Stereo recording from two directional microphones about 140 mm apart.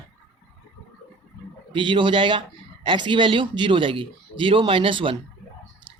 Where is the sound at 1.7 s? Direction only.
35° right (ahead or behind).